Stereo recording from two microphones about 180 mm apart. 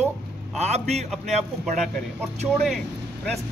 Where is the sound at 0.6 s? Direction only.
35° right (ahead or behind).